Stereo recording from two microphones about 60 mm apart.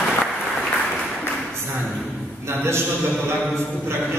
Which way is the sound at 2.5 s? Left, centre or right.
Right.